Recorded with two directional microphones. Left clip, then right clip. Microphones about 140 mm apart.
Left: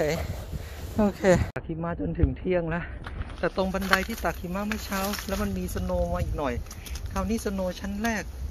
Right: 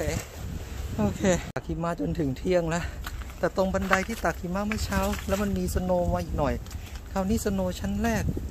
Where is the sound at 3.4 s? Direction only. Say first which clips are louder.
Right 2 dB; 35° right (ahead or behind); by 8.2 s 50° right (ahead or behind).